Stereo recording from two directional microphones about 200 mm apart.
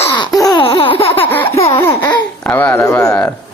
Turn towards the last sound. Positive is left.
turn(degrees=15)  # may be behind; listen again after turning